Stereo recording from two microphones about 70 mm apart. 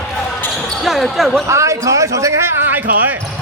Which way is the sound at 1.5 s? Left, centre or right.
Right.